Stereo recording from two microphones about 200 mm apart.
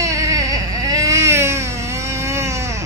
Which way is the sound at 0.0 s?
15° right (ahead or behind).